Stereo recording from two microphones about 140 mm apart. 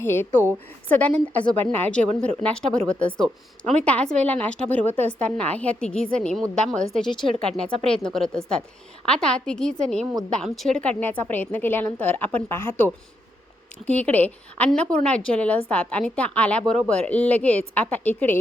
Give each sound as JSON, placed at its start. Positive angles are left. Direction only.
{"t": 0.0, "sound": "a woman's voice", "side_deg": 15}
{"t": 7.1, "sound": "speech", "side_deg": 35}
{"t": 7.4, "sound": "a woman's voice", "side_deg": 5}